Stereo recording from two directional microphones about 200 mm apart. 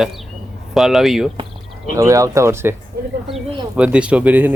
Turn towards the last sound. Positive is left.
turn(degrees=-10)  # may be behind; listen again after turning